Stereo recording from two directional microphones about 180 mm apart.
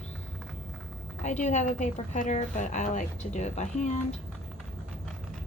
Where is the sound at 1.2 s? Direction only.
40° left (ahead or behind).